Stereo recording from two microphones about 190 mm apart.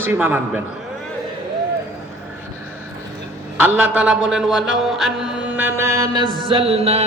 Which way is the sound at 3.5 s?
10° right (ahead or behind).